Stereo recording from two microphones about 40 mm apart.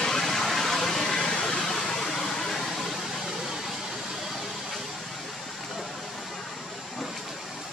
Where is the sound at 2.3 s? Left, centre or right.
Centre.